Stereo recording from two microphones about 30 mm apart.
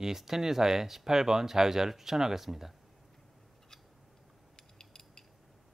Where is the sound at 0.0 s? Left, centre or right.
Centre.